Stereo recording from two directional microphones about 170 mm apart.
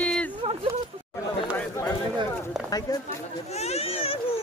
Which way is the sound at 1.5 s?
15° left (ahead or behind).